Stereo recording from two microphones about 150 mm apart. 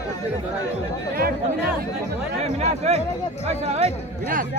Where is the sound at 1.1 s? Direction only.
90° right.